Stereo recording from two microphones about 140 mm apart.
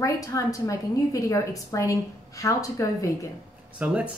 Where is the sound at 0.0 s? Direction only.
25° left (ahead or behind).